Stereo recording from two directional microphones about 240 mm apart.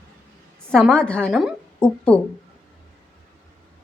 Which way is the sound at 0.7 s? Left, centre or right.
Centre.